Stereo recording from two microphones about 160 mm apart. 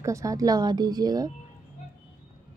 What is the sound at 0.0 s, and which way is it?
A woman's voice, 20° right (ahead or behind).